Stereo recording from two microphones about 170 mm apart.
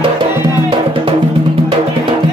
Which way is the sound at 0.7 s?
35° right (ahead or behind).